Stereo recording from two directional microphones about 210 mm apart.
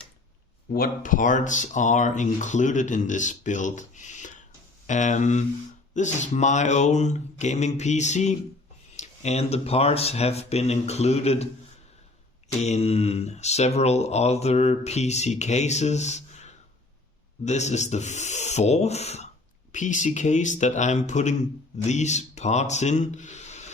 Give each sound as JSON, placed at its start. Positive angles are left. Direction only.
{"t": 0.7, "sound": "speech", "side_deg": 40}
{"t": 12.5, "sound": "speech", "side_deg": 30}